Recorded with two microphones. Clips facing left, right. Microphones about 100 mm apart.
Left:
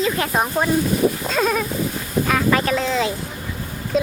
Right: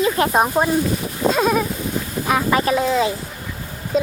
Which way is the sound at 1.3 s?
10° right (ahead or behind).